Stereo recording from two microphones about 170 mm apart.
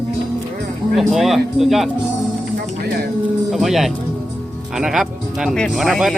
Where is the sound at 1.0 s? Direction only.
Centre (ahead or behind).